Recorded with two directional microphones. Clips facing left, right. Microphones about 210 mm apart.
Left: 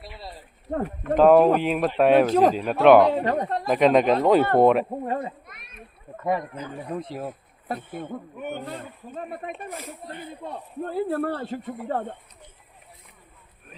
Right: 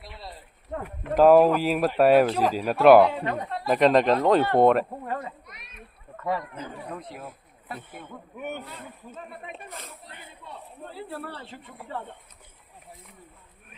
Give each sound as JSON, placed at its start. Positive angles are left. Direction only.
{"t": 0.0, "sound": "a sound", "side_deg": 0}
{"t": 0.7, "sound": "speech", "side_deg": 40}
{"t": 1.1, "sound": "speech", "side_deg": -5}
{"t": 2.2, "sound": "speech", "side_deg": 45}
{"t": 2.6, "sound": "speech", "side_deg": -5}
{"t": 3.1, "sound": "speech", "side_deg": 35}
{"t": 3.7, "sound": "speech", "side_deg": 0}
{"t": 5.0, "sound": "speech", "side_deg": 30}
{"t": 6.9, "sound": "speech", "side_deg": 35}
{"t": 7.3, "sound": "speech", "side_deg": 45}